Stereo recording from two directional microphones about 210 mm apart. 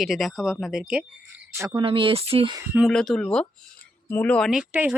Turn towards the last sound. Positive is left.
turn(degrees=-5)  # may be behind; listen again after turning